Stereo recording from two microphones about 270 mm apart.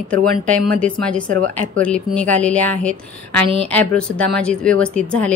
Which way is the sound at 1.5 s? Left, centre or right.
Centre.